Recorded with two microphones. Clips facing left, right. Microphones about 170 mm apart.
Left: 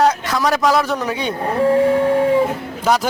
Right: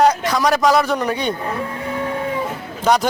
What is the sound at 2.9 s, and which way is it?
Speech, 5° left (ahead or behind).